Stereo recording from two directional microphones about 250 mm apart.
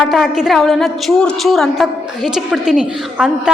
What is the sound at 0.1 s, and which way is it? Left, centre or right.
A woman's voice, centre.